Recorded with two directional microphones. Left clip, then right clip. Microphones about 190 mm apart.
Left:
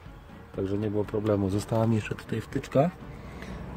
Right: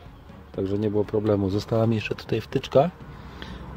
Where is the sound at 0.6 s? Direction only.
10° right (ahead or behind).